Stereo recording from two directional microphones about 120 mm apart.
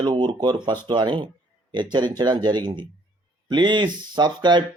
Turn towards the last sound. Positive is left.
turn(degrees=-40)  # may be behind; listen again after turning